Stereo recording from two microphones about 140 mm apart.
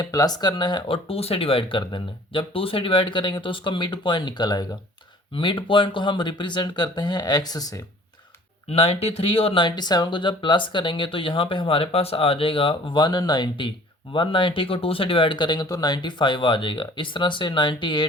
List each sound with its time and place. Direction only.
0.0 s speech: 25° left (ahead or behind)
8.7 s speech: 45° left (ahead or behind)